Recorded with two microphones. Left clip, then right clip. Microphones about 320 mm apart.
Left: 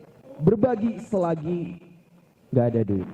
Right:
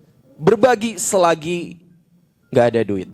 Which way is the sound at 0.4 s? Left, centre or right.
Centre.